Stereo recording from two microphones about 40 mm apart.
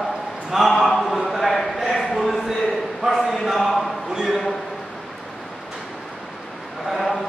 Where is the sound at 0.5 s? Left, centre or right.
Centre.